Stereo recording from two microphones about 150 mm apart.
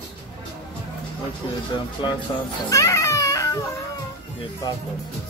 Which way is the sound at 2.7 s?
20° left (ahead or behind).